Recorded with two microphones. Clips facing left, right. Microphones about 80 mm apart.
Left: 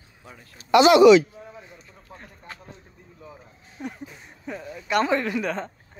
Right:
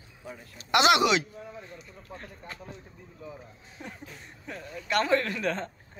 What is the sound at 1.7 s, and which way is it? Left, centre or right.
Speech, centre.